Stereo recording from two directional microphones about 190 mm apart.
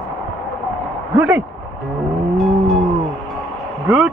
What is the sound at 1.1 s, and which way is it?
Speech, 10° right (ahead or behind).